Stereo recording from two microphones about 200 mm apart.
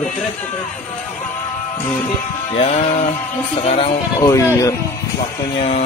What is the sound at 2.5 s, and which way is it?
Music, 35° left (ahead or behind).